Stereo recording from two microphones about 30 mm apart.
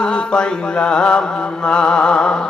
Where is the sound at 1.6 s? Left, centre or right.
Left.